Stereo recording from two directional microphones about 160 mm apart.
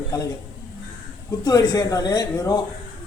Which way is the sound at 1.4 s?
25° left (ahead or behind).